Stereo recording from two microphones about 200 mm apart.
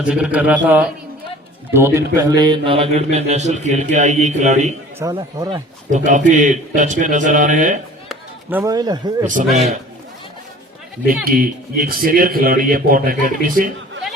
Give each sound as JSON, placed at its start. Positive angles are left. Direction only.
{"t": 0.0, "sound": "speech", "side_deg": -5}
{"t": 5.1, "sound": "speech", "side_deg": -20}
{"t": 5.9, "sound": "speech", "side_deg": -40}
{"t": 8.4, "sound": "speech", "side_deg": -15}
{"t": 9.5, "sound": "a man's voice", "side_deg": 0}
{"t": 11.3, "sound": "a man's voice", "side_deg": -45}